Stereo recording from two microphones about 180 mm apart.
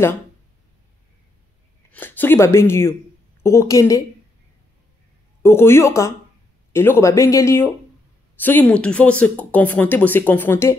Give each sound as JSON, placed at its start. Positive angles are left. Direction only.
{"t": 1.9, "sound": "speech", "side_deg": 10}
{"t": 5.4, "sound": "speech", "side_deg": 15}